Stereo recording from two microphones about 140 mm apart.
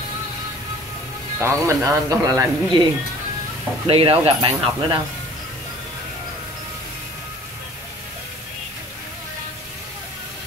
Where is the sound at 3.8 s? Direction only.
40° right (ahead or behind).